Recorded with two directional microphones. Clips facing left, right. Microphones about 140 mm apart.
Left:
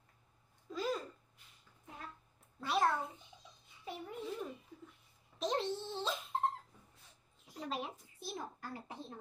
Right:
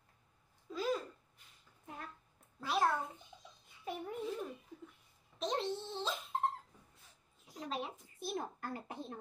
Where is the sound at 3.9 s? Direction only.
55° right (ahead or behind).